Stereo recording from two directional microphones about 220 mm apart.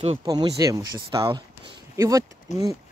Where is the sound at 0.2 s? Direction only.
15° right (ahead or behind).